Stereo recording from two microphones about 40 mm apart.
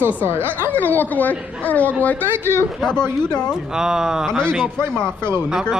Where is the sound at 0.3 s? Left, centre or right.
Right.